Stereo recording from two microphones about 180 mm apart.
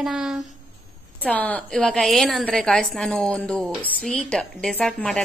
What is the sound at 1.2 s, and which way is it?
A woman's voice, 10° left (ahead or behind).